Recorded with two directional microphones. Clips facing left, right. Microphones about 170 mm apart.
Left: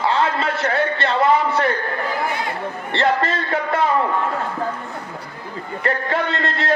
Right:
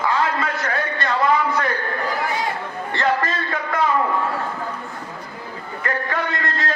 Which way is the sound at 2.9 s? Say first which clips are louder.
Left 2 dB; 25° left (ahead or behind).